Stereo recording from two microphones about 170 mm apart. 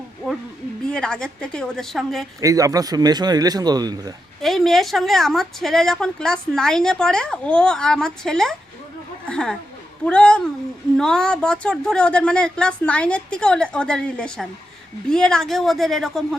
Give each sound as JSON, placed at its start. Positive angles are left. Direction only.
{"t": 0.9, "sound": "a woman's voice", "side_deg": 5}
{"t": 2.4, "sound": "speech", "side_deg": -20}
{"t": 4.4, "sound": "a woman's voice", "side_deg": 0}